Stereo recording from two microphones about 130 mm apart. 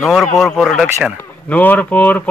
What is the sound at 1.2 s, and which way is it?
A man's voice, 15° left (ahead or behind).